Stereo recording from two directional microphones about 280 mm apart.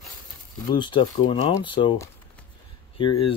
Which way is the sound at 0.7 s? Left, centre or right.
Centre.